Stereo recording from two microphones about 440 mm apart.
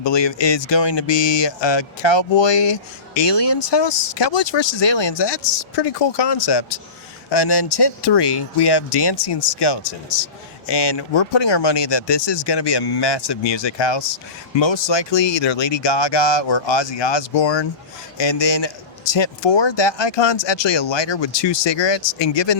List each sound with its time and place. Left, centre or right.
0.0 s speech: left